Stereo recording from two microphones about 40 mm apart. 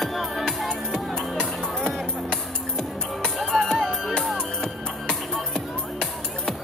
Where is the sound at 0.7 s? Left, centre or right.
Centre.